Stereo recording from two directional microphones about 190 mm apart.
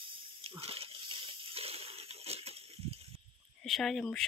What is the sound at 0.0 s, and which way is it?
Water, 25° right (ahead or behind).